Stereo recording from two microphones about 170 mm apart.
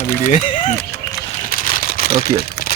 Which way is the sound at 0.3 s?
50° left (ahead or behind).